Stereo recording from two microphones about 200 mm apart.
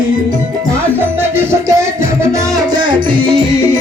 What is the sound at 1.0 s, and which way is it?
Music, 10° right (ahead or behind).